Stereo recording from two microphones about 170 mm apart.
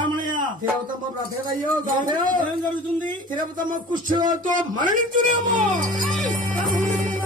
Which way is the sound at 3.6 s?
50° right (ahead or behind).